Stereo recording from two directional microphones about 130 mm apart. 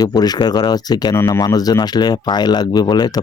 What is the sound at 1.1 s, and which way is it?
Speech, 20° left (ahead or behind).